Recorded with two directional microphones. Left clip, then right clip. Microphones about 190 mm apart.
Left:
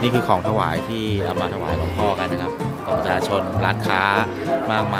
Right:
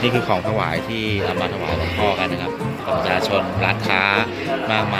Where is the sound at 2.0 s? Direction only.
5° left (ahead or behind).